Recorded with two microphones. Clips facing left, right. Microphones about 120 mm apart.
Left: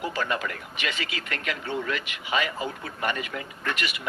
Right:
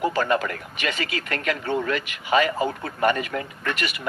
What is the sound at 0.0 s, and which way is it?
Speech, 45° right (ahead or behind).